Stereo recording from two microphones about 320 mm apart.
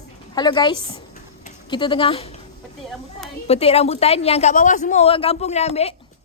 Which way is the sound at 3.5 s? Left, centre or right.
Centre.